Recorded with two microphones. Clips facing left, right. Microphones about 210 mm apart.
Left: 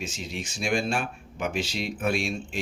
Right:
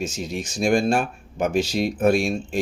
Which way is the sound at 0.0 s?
45° right (ahead or behind).